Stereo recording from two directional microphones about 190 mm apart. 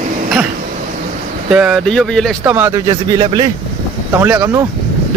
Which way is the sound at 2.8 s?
25° right (ahead or behind).